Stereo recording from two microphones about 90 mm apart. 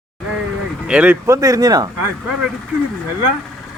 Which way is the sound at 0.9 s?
15° right (ahead or behind).